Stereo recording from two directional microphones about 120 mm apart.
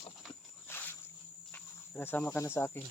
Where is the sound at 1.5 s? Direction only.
15° left (ahead or behind).